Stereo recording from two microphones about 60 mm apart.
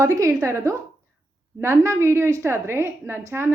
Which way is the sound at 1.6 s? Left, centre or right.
Right.